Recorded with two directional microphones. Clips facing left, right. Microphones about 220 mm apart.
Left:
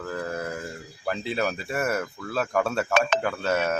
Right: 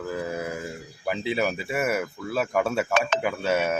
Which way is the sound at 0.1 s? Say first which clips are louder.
Even; 10° right (ahead or behind).